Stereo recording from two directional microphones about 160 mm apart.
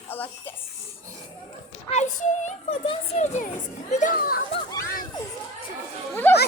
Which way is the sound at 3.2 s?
50° left (ahead or behind).